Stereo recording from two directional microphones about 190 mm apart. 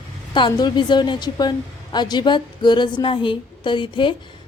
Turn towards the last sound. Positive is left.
turn(degrees=25)  # may be behind; listen again after turning